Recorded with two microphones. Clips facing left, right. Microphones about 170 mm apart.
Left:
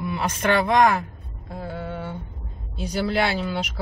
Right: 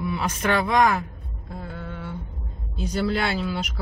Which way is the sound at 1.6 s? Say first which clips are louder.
Left 5 dB; 5° left (ahead or behind).